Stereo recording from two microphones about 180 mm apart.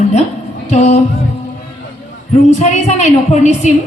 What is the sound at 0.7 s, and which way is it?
Speech, 40° left (ahead or behind).